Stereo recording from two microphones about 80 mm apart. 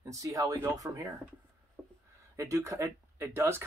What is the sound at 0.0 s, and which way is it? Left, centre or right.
Speech, right.